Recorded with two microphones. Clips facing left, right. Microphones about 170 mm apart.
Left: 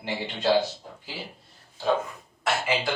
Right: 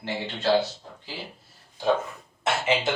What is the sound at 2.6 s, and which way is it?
Speech, 20° right (ahead or behind).